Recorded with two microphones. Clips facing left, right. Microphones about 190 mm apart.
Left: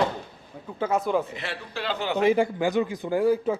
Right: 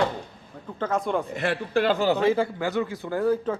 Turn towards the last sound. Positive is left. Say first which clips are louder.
# left 2 dB
turn(degrees=10)  # may be behind; listen again after turning